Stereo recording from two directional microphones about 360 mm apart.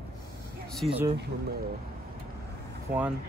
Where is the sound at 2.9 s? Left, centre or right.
Right.